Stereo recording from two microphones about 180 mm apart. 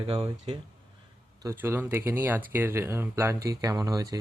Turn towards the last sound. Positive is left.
turn(degrees=-20)  # may be behind; listen again after turning